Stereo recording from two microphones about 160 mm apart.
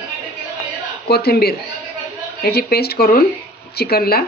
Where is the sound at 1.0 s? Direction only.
80° left.